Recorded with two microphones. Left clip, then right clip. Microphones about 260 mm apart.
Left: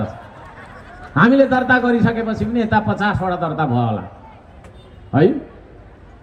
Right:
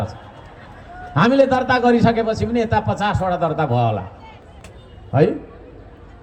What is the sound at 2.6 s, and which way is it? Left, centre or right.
Speech, right.